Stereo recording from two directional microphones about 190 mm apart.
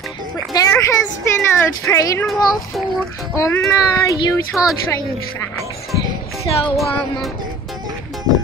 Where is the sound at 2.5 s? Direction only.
Centre (ahead or behind).